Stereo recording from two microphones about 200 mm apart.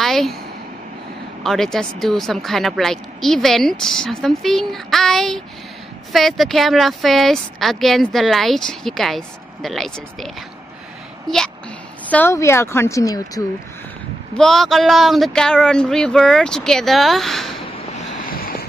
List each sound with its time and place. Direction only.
0.0 s a sound: centre (ahead or behind)
1.4 s speech: centre (ahead or behind); by 13.4 s 15° left (ahead or behind)
14.3 s speech: centre (ahead or behind)
17.9 s boat: 40° left (ahead or behind)